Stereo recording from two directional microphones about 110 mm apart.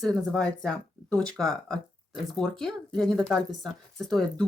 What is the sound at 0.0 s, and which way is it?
Speech, 5° left (ahead or behind).